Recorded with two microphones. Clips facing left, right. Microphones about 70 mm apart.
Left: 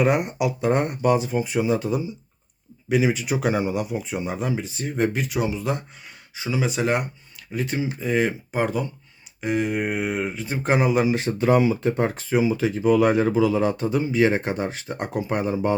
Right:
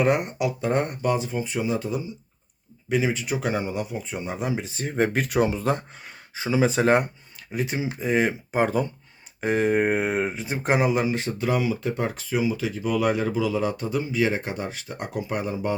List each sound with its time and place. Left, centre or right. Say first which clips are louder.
0.0 s speech: left 1 dB; centre
4.4 s speech: left 1 dB; right
4.8 s speech: even; right
5.1 s speech: right 2 dB; right
7.5 s speech: left 1 dB; centre
10.6 s speech: left 2 dB; centre
11.0 s speech: left 4 dB; centre
11.4 s speech: left 6 dB; left